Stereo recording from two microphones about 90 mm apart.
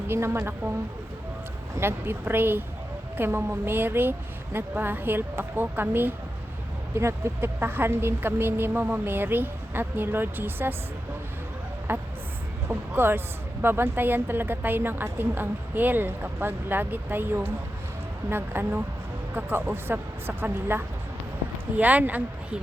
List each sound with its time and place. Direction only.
0.1 s speech: 25° right (ahead or behind)
1.7 s speech: 25° right (ahead or behind)
11.9 s speech: 25° right (ahead or behind)